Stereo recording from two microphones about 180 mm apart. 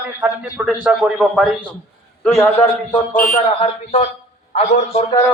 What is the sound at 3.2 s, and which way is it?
Speech, 50° left (ahead or behind).